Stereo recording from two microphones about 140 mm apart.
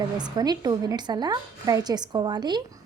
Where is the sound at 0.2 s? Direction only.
30° right (ahead or behind).